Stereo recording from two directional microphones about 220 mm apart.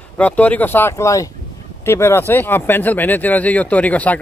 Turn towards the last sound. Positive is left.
turn(degrees=5)  # may be behind; listen again after turning